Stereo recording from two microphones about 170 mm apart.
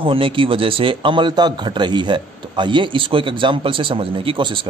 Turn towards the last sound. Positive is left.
turn(degrees=-30)  # may be behind; listen again after turning